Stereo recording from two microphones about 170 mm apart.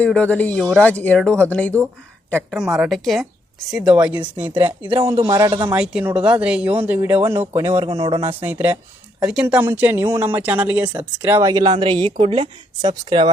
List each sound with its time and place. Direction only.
0.0 s a woman's voice: 5° left (ahead or behind); by 4.5 s 10° right (ahead or behind)
5.3 s speech: 20° right (ahead or behind)
5.7 s speech: 5° right (ahead or behind); by 8.3 s 20° right (ahead or behind)
8.4 s speech: 10° right (ahead or behind); by 13.3 s 25° right (ahead or behind)